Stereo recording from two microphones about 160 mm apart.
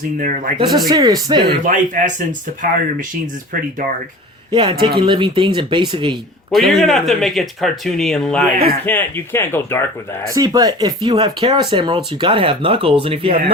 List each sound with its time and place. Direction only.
0.2 s speech: 60° right (ahead or behind)
0.9 s speech: 25° right (ahead or behind)
1.6 s speech: 55° right (ahead or behind)
3.5 s speech: 65° right (ahead or behind)
4.5 s speech: 30° right (ahead or behind)
6.5 s speech: centre (ahead or behind); by 9.8 s 15° left (ahead or behind)
10.3 s speech: 25° right (ahead or behind)